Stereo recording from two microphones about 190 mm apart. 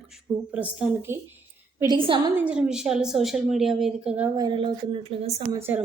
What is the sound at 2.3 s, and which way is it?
A woman's voice, 5° right (ahead or behind).